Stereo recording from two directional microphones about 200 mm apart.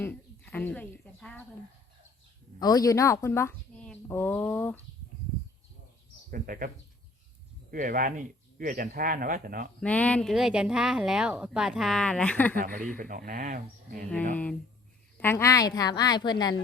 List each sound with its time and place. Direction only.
0.0 s a sound: 10° left (ahead or behind)
2.6 s a woman's voice: 20° left (ahead or behind)
6.3 s speech: 45° right (ahead or behind)
7.7 s speech: 45° right (ahead or behind)
9.8 s speech: 5° left (ahead or behind)
13.0 s speech: 45° right (ahead or behind)
15.2 s a woman's voice: 15° left (ahead or behind)